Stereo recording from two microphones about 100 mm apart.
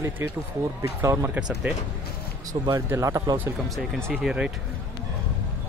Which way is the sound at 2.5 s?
40° right (ahead or behind).